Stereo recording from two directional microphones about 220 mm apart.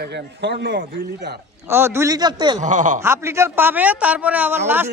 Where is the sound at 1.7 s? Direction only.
10° right (ahead or behind).